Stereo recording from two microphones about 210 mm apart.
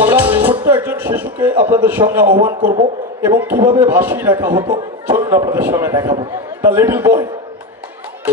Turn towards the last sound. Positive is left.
turn(degrees=-10)  # may be behind; listen again after turning